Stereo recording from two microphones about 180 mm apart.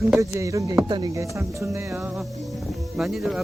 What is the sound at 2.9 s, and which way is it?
Speech, centre (ahead or behind).